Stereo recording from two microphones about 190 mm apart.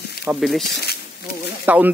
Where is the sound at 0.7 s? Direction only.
60° left (ahead or behind).